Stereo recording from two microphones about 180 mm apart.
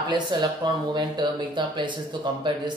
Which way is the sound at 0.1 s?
25° right (ahead or behind).